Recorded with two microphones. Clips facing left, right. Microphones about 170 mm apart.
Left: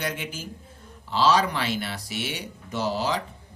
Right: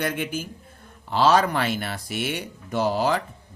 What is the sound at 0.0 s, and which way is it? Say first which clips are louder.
Speech: right 5 dB; 55° right (ahead or behind).